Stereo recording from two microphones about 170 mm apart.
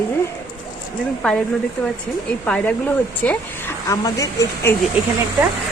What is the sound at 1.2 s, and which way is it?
Speech, 5° left (ahead or behind).